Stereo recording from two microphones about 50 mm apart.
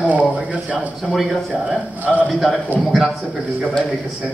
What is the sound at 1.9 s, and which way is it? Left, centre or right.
Speech, right.